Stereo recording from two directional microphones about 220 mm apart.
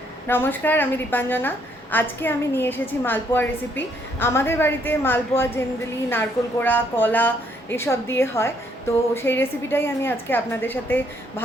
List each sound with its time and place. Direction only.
0.3 s a woman's voice: 10° left (ahead or behind)